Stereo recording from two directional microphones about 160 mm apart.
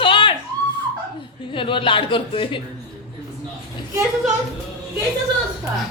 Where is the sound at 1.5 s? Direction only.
30° left (ahead or behind).